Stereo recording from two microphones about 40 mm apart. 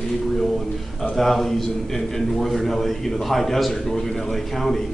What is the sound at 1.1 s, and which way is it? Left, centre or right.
A man's voice, centre.